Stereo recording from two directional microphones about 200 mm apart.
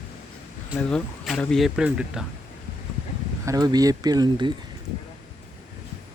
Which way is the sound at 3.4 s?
20° right (ahead or behind).